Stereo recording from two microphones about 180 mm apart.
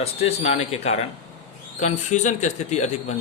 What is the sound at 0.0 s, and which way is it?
Speech, 35° left (ahead or behind).